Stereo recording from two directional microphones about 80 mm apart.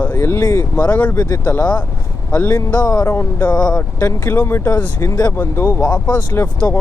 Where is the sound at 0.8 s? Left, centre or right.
Centre.